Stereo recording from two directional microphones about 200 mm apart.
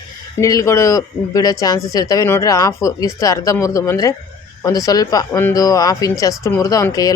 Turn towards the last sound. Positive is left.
turn(degrees=15)  # may be behind; listen again after turning